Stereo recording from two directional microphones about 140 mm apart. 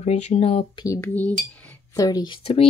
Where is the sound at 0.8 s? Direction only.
20° left (ahead or behind).